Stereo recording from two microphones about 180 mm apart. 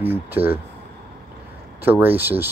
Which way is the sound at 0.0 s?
10° right (ahead or behind).